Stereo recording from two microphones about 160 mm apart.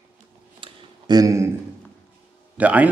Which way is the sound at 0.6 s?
25° right (ahead or behind).